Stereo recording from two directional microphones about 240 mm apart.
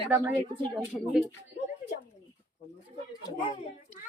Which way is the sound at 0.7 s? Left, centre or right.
Centre.